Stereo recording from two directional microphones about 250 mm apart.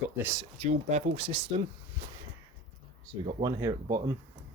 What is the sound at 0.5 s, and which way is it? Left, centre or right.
Speech, right.